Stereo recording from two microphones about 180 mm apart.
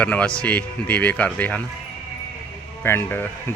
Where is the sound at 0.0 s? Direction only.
5° left (ahead or behind).